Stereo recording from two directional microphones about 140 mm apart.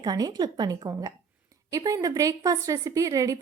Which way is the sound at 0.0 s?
30° right (ahead or behind).